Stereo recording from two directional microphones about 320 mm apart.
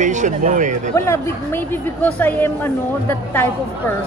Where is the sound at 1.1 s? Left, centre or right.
Centre.